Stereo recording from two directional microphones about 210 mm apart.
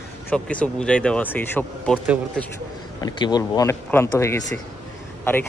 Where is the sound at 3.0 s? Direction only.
20° left (ahead or behind).